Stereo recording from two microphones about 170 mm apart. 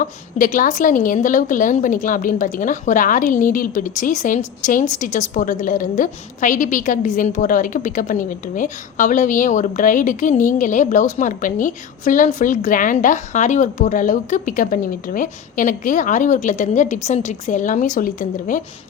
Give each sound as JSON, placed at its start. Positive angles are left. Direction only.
{"t": 0.0, "sound": "a woman's voice", "side_deg": 50}